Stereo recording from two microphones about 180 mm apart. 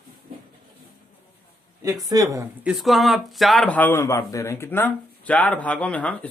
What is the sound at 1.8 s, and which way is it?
Speech, 20° right (ahead or behind).